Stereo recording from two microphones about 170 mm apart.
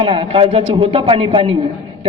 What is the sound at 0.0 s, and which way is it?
A man's voice, 30° right (ahead or behind).